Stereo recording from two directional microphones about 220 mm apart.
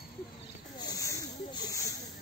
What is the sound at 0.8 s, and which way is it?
Snake, 15° left (ahead or behind).